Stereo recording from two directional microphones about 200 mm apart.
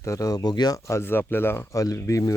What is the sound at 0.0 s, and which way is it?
Speech, 15° left (ahead or behind).